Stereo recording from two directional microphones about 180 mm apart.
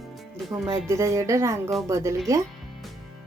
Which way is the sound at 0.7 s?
15° right (ahead or behind).